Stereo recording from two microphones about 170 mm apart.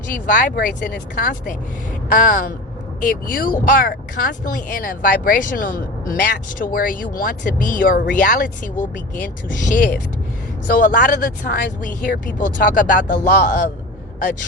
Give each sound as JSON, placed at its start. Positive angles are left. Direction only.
{"t": 0.1, "sound": "speech", "side_deg": 50}